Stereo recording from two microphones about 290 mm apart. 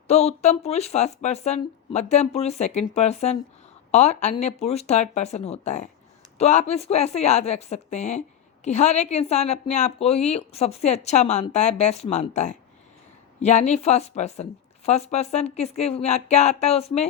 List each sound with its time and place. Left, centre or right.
0.1 s a woman's voice: left